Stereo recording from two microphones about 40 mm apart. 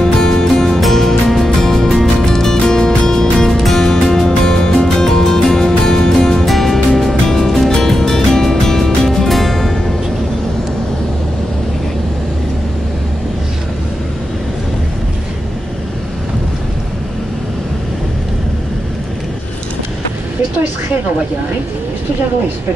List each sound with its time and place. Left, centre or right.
0.0 s music: centre
3.4 s music: centre